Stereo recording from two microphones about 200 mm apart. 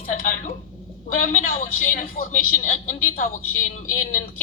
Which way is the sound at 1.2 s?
40° left (ahead or behind).